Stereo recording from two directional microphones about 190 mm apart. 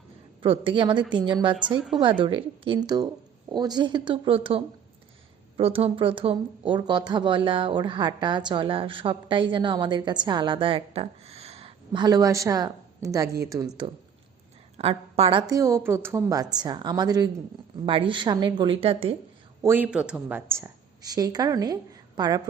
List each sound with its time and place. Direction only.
0.4 s speech: 30° right (ahead or behind)
14.8 s speech: 30° right (ahead or behind)
19.6 s a woman's voice: 10° right (ahead or behind)